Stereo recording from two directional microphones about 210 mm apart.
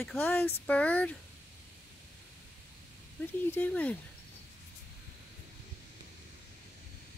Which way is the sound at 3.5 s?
5° left (ahead or behind).